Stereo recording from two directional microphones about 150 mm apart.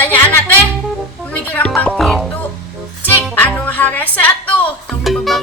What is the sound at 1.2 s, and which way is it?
Music, 10° left (ahead or behind).